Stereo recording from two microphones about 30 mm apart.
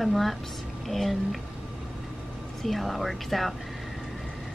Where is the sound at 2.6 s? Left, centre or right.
Centre.